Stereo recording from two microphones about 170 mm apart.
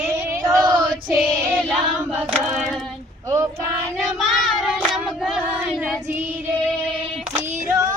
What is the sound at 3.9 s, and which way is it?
Child singing, centre (ahead or behind).